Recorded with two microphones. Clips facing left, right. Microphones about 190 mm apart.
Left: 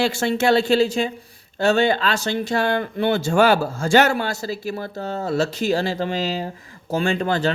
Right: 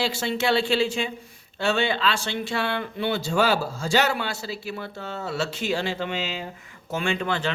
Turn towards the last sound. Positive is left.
turn(degrees=40)  # may be behind; listen again after turning